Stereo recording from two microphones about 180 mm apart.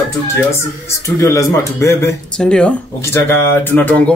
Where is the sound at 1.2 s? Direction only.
15° left (ahead or behind).